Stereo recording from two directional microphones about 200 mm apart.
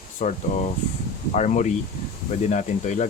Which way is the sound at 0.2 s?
40° left (ahead or behind).